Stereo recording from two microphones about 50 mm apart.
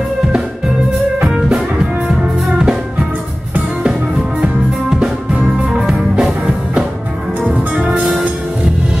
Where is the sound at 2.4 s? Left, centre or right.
Centre.